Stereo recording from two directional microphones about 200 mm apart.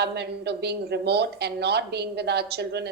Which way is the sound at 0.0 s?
55° right (ahead or behind).